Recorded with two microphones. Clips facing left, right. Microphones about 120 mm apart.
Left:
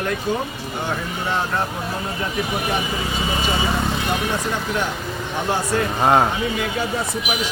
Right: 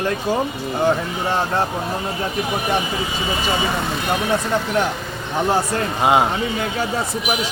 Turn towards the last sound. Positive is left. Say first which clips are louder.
# even
turn(degrees=-10)  # may be behind; listen again after turning